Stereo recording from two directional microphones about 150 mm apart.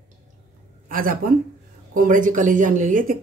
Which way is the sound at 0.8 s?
70° right (ahead or behind).